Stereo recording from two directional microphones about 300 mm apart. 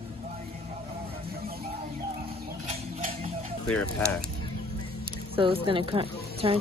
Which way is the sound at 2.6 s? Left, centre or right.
Right.